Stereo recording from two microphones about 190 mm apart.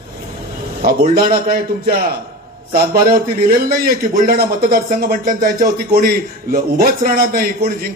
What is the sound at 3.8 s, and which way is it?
A man's voice, 50° right (ahead or behind).